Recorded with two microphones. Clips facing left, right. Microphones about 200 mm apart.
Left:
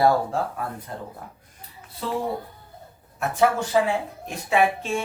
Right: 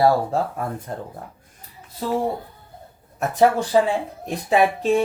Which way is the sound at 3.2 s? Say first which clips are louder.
Right 4 dB; 40° right (ahead or behind).